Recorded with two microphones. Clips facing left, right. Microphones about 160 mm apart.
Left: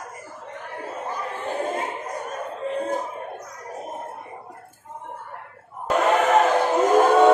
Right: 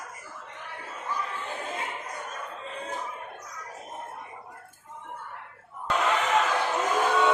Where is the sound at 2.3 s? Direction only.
45° left (ahead or behind).